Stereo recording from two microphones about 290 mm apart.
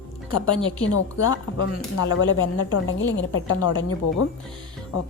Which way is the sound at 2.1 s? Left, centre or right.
Left.